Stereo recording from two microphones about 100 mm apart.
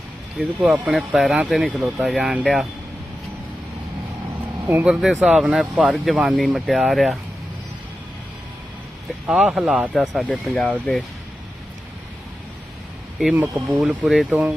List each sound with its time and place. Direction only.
0.3 s speech: 5° right (ahead or behind)
4.7 s speech: 15° right (ahead or behind)
4.9 s speech: centre (ahead or behind)
9.2 s speech: 10° right (ahead or behind)
13.3 s speech: 20° right (ahead or behind)
13.8 s speech: 5° right (ahead or behind)
14.3 s speech: 15° right (ahead or behind)